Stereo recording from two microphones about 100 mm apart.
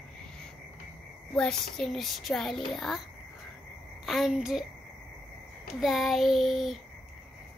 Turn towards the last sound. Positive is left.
turn(degrees=0)  # may be behind; listen again after turning